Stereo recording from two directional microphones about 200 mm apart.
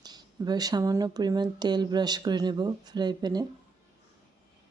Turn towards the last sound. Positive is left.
turn(degrees=-20)  # may be behind; listen again after turning